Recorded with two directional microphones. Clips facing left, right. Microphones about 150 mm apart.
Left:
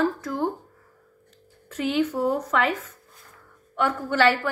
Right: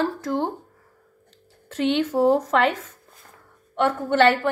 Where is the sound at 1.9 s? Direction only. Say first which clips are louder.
Right 4 dB; 30° right (ahead or behind).